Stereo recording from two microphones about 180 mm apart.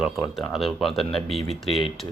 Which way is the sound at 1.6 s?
30° left (ahead or behind).